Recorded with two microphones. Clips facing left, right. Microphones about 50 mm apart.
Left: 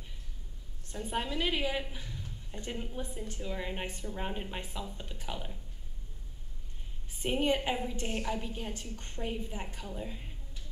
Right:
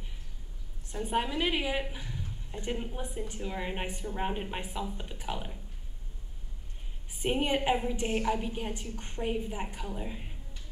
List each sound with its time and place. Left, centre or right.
0.9 s a woman's voice: centre
7.2 s a woman's voice: centre